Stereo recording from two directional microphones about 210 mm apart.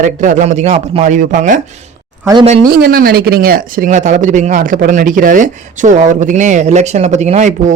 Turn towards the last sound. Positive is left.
turn(degrees=-35)  # may be behind; listen again after turning